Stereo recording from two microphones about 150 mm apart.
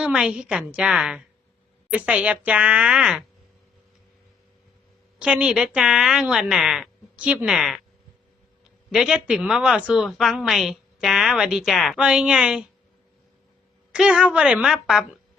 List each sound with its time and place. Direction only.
0.0 s a woman's voice: 5° right (ahead or behind)
5.2 s a woman's voice: 5° right (ahead or behind)
8.9 s a woman's voice: 5° right (ahead or behind)
13.9 s a woman's voice: 5° right (ahead or behind)